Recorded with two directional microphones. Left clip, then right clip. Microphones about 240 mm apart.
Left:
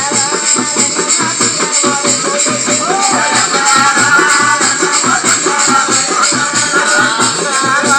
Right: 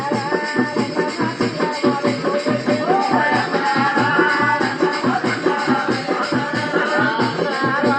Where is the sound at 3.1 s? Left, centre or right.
Left.